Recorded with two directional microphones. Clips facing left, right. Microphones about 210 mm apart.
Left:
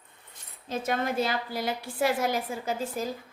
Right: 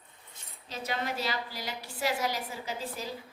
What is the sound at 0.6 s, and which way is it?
A woman's voice, 50° left (ahead or behind).